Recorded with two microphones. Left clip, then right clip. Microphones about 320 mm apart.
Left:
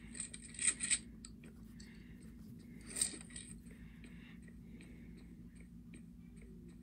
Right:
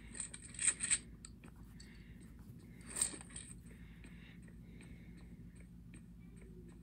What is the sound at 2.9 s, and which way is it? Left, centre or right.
Mechanisms, centre.